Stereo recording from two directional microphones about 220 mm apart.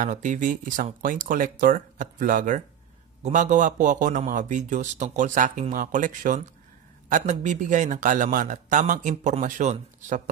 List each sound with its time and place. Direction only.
0.0 s speech: 35° right (ahead or behind)